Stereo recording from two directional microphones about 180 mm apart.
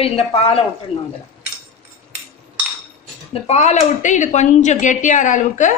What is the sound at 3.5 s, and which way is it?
A woman's voice, 35° left (ahead or behind).